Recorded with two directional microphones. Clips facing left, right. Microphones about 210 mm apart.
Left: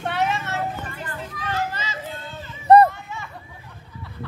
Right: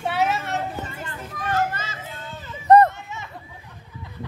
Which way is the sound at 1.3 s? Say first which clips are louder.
Right 4 dB; 50° right (ahead or behind).